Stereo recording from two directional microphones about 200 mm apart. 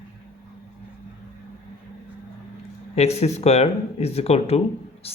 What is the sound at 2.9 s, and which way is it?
Speech, 30° left (ahead or behind).